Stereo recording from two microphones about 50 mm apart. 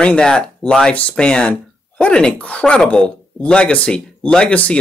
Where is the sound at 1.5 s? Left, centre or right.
Left.